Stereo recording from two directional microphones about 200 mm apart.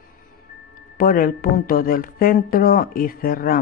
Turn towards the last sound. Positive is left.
turn(degrees=45)  # may be behind; listen again after turning